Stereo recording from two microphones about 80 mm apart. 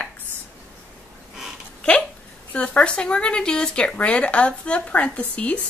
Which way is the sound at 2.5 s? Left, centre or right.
Centre.